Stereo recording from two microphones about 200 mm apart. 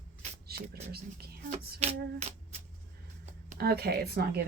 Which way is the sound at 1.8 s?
30° right (ahead or behind).